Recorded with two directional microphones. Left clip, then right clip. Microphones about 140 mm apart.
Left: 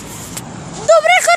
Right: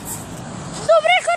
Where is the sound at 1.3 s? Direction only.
70° left (ahead or behind).